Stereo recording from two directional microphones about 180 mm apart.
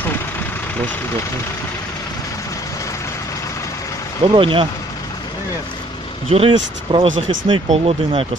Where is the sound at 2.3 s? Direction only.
20° left (ahead or behind).